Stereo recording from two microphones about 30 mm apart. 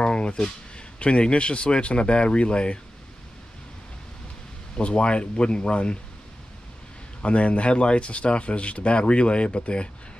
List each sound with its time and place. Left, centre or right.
0.0 s speech: left
4.7 s speech: left
7.2 s speech: left